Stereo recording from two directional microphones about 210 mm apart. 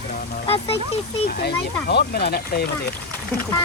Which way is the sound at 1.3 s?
50° left (ahead or behind).